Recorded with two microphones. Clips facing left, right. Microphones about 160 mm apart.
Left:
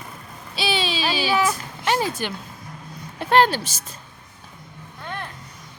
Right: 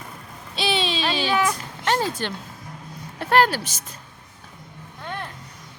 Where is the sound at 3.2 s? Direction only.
25° left (ahead or behind).